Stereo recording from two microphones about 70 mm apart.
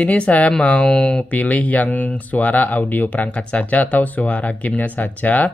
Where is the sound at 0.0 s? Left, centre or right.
Left.